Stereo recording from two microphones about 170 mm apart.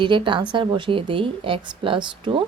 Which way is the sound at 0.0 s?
30° right (ahead or behind).